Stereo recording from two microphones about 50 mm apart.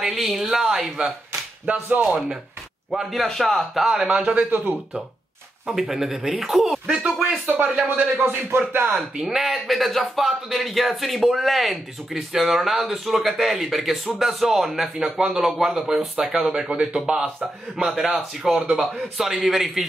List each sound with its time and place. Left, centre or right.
0.0 s speech: centre
2.9 s speech: centre
4.1 s speech: right
4.4 s speech: right
5.7 s speech: centre
7.4 s speech: right
9.2 s a man's voice: centre